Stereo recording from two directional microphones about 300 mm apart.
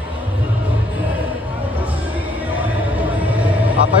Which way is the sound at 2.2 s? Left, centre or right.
Centre.